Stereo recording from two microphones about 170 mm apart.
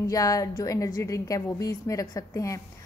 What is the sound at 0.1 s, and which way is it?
A woman's voice, 20° left (ahead or behind).